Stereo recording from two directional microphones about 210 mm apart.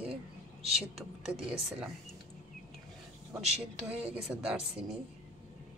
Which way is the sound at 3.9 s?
5° right (ahead or behind).